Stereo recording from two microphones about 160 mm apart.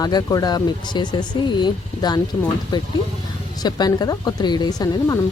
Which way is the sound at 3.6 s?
25° left (ahead or behind).